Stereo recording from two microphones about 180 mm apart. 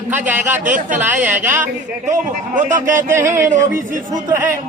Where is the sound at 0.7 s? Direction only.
45° right (ahead or behind).